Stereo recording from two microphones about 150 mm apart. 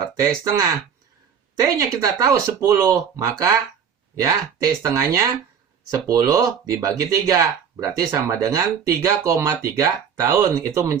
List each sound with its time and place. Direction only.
0.2 s speech: 25° right (ahead or behind)